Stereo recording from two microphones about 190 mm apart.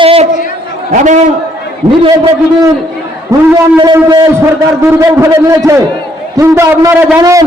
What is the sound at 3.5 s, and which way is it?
A man's voice, 20° right (ahead or behind).